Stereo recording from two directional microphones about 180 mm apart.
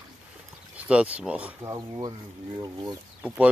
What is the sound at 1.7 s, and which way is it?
Speech, 20° right (ahead or behind).